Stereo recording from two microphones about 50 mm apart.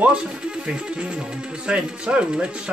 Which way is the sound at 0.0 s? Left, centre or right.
Centre.